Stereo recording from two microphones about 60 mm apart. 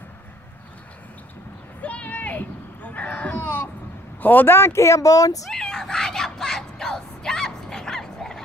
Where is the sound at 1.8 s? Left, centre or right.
Left.